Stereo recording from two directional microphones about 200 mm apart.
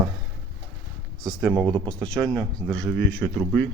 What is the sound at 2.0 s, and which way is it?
Speech, 5° left (ahead or behind).